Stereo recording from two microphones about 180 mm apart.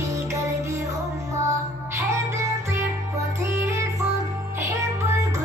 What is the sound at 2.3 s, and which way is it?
Music, 15° right (ahead or behind).